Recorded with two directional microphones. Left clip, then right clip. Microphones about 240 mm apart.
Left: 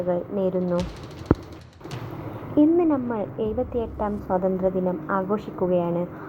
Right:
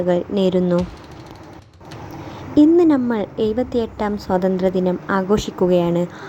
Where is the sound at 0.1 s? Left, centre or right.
Right.